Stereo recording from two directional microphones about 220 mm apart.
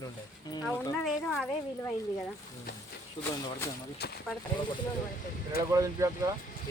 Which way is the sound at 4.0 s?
45° left (ahead or behind).